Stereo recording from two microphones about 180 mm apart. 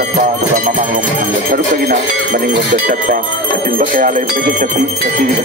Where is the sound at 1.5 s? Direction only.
55° right (ahead or behind).